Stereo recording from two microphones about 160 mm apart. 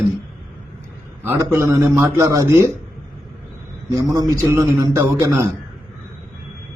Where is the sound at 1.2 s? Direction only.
20° right (ahead or behind).